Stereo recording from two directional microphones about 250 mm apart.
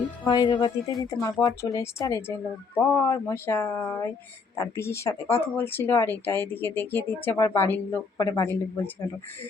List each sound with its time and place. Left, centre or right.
0.3 s speech: centre